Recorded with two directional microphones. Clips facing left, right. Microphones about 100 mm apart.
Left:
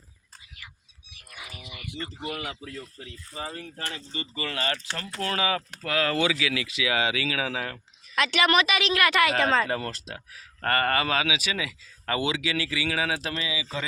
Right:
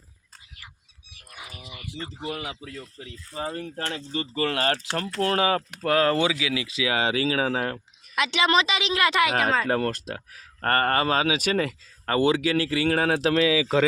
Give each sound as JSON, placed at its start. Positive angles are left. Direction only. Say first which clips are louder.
{"t": 1.3, "sound": "wild animals", "louder": "right 1 dB", "side_deg": -35}
{"t": 2.5, "sound": "a woman's voice", "louder": "even", "side_deg": -10}
{"t": 3.5, "sound": "speech", "louder": "right 5 dB", "side_deg": -55}
{"t": 6.3, "sound": "speech", "louder": "right 1 dB", "side_deg": -20}
{"t": 8.1, "sound": "a woman's voice", "louder": "right 1 dB", "side_deg": -20}
{"t": 9.4, "sound": "speech", "louder": "left 1 dB", "side_deg": -10}
{"t": 9.6, "sound": "speech", "louder": "right 6 dB", "side_deg": -50}